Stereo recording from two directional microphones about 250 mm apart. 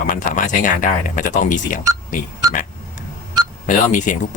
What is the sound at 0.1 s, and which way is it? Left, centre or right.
Speech, left.